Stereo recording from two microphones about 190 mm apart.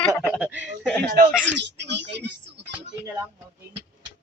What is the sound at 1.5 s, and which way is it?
Speech, 65° right (ahead or behind).